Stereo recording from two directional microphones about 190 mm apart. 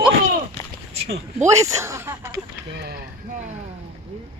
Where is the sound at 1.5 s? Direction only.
15° right (ahead or behind).